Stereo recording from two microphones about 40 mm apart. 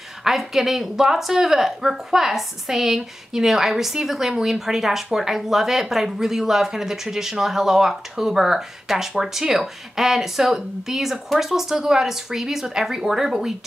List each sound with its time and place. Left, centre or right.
0.2 s speech: centre